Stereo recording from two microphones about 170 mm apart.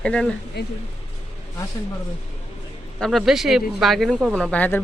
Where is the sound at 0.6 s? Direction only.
70° left (ahead or behind).